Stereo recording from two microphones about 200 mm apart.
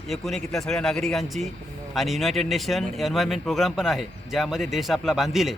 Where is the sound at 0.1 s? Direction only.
Centre (ahead or behind).